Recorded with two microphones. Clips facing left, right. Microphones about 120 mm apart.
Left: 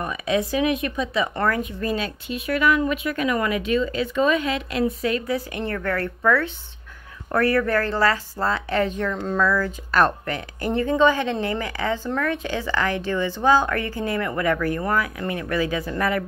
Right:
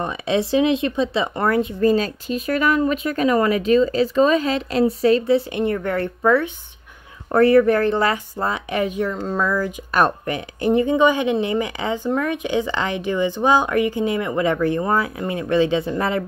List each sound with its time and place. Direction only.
0.0 s speech: 30° right (ahead or behind)